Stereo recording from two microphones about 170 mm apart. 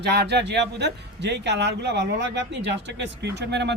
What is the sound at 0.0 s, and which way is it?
Speech, 75° right (ahead or behind).